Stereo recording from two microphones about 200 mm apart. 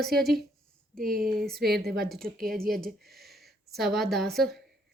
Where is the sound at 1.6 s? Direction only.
50° right (ahead or behind).